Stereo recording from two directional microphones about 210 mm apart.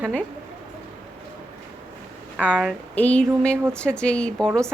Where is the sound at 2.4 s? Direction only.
5° right (ahead or behind).